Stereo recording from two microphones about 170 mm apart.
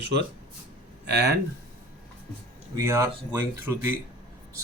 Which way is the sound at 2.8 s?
20° right (ahead or behind).